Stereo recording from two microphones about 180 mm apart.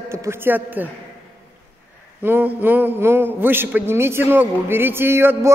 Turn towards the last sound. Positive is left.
turn(degrees=-15)  # may be behind; listen again after turning